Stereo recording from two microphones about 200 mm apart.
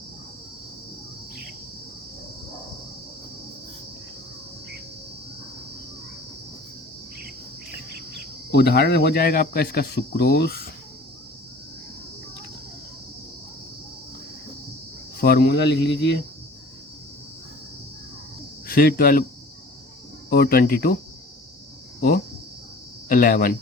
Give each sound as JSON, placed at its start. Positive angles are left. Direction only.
{"t": 8.5, "sound": "speech", "side_deg": 55}
{"t": 15.2, "sound": "speech", "side_deg": 50}
{"t": 18.7, "sound": "speech", "side_deg": 45}
{"t": 20.3, "sound": "speech", "side_deg": 50}
{"t": 23.0, "sound": "speech", "side_deg": 45}